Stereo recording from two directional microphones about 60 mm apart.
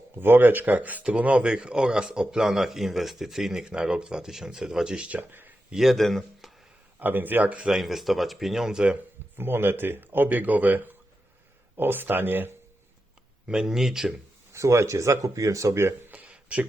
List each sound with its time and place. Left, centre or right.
0.2 s speech: right; by 5.0 s centre
5.0 s speech: right
5.7 s speech: centre
7.0 s speech: right
7.6 s speech: centre
9.3 s speech: right
13.5 s speech: centre
14.5 s speech: right
16.0 s a sound: right